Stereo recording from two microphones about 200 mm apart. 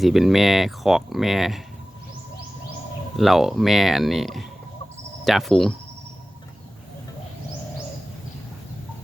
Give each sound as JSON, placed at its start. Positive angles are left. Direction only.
{"t": 0.0, "sound": "speech", "side_deg": 0}
{"t": 3.2, "sound": "speech", "side_deg": 0}